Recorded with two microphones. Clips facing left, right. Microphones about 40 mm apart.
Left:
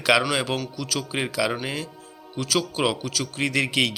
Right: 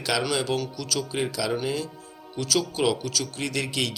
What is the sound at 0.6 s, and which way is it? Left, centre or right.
Speech, centre.